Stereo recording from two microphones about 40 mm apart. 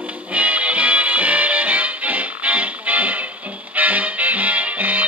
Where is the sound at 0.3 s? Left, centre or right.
Right.